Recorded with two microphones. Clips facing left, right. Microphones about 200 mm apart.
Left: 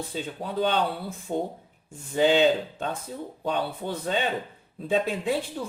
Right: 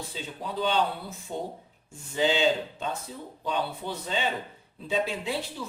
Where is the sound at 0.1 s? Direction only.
50° left (ahead or behind).